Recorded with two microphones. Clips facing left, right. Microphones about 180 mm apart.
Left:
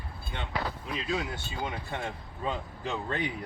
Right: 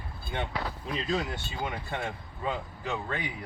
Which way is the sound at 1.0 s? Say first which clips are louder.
Right 2 dB; centre (ahead or behind).